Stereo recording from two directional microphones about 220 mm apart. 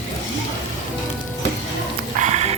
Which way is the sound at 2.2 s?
30° right (ahead or behind).